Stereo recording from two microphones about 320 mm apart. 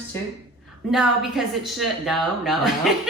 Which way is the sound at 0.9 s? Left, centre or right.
Centre.